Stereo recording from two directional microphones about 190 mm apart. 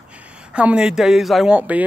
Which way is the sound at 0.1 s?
5° right (ahead or behind).